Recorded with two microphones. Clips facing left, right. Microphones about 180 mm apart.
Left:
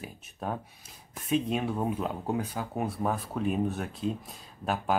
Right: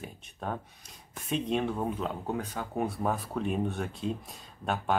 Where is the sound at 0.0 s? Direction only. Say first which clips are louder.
Left 1 dB; 5° left (ahead or behind).